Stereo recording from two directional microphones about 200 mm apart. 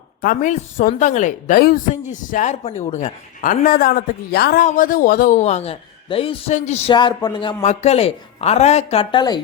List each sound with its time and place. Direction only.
0.2 s a woman's voice: 40° left (ahead or behind)
4.6 s a woman's voice: 40° left (ahead or behind); by 7.5 s 20° left (ahead or behind)
7.6 s a woman's voice: 35° left (ahead or behind)